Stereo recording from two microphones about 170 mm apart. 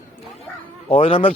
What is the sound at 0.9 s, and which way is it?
Speech, 35° left (ahead or behind).